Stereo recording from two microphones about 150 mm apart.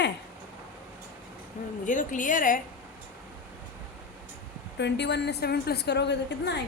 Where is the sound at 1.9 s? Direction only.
60° left (ahead or behind).